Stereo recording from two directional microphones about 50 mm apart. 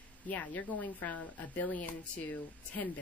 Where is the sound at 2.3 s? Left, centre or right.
Left.